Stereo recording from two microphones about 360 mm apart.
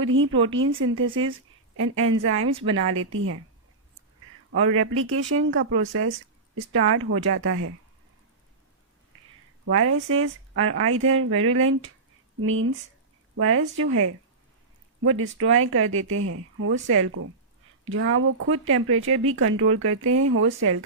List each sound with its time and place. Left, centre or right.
0.0 s speech: right
2.4 s a woman's voice: centre
2.9 s speech: right
4.7 s speech: right
9.7 s speech: right